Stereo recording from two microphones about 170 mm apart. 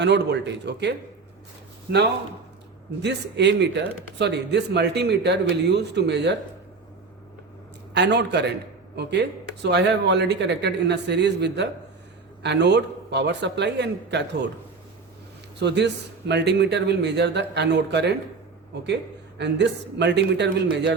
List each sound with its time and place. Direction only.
0.0 s speech: 90° right
3.0 s speech: 90° right
7.9 s a man's voice: 90° right
15.6 s speech: 90° right
19.4 s speech: 90° right